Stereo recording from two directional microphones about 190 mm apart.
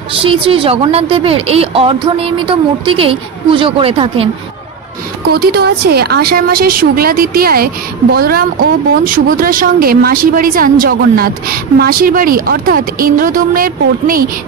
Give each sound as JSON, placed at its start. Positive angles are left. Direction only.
{"t": 0.2, "sound": "a woman's voice", "side_deg": -30}
{"t": 5.3, "sound": "a woman's voice", "side_deg": -55}